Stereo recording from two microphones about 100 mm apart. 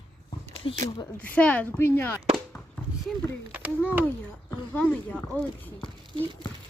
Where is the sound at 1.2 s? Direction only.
15° left (ahead or behind).